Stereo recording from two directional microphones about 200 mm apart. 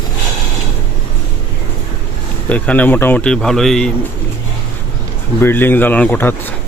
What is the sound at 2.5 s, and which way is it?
Speech, 10° left (ahead or behind).